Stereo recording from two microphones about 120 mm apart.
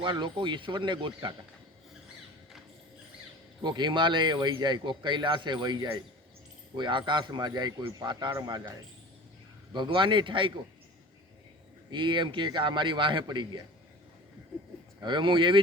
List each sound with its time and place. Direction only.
0.0 s speech: 40° right (ahead or behind)
3.6 s speech: 40° right (ahead or behind)
9.7 s speech: 40° right (ahead or behind)
11.9 s speech: 40° right (ahead or behind)
15.0 s speech: 40° right (ahead or behind)